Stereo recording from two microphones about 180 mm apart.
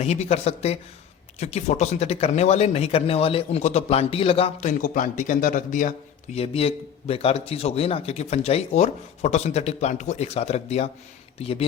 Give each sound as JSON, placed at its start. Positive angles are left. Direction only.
{"t": 0.0, "sound": "a man's voice", "side_deg": 35}
{"t": 4.8, "sound": "a man's voice", "side_deg": 50}
{"t": 6.3, "sound": "a man's voice", "side_deg": 35}